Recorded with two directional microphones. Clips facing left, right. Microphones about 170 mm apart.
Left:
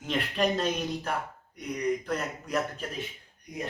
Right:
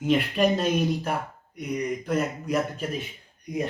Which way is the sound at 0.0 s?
10° right (ahead or behind).